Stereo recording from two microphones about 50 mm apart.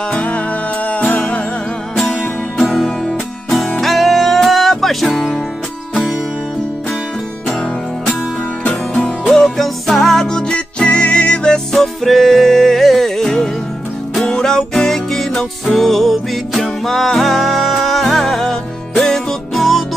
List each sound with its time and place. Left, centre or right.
0.1 s music: left
2.0 s music: centre
8.6 s music: left
9.3 s music: centre
11.7 s music: centre